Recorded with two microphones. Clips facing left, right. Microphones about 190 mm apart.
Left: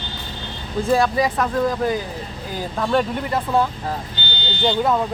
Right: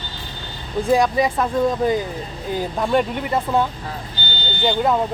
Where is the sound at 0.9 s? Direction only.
20° right (ahead or behind).